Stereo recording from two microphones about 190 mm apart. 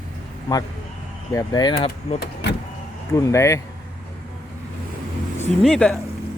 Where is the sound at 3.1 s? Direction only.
15° left (ahead or behind).